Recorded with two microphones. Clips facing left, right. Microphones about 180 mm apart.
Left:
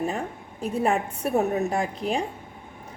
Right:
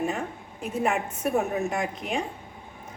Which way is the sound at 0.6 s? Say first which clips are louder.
Left 3 dB; 35° left (ahead or behind).